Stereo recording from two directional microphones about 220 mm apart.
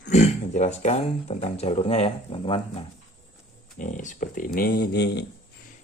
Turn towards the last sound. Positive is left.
turn(degrees=50)  # may be behind; listen again after turning